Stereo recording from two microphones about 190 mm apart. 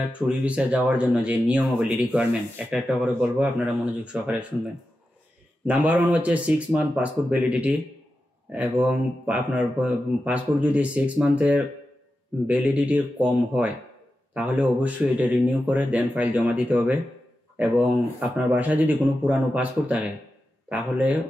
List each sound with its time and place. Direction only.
0.3 s speech: 5° right (ahead or behind)
5.7 s speech: 10° right (ahead or behind)